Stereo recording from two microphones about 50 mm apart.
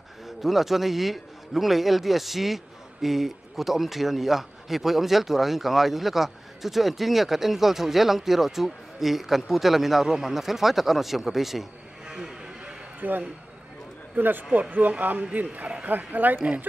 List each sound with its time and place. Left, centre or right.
0.4 s a man's voice: centre
12.1 s a sound: centre
13.0 s speech: right